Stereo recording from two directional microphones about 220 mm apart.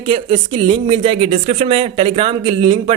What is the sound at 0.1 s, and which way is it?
Speech, 25° right (ahead or behind).